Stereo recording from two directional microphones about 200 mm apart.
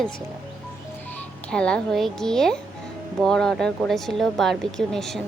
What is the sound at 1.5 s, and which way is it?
Speech, 5° left (ahead or behind).